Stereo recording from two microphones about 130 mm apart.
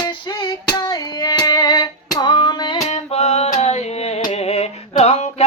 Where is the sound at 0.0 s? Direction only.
35° left (ahead or behind).